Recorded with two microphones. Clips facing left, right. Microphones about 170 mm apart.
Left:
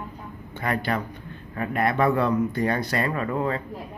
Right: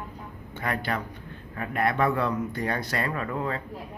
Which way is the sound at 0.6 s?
Centre (ahead or behind).